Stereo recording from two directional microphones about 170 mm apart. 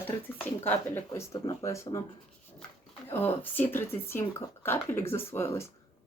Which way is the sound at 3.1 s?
10° left (ahead or behind).